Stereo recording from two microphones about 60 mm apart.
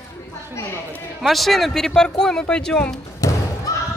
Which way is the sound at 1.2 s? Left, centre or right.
Centre.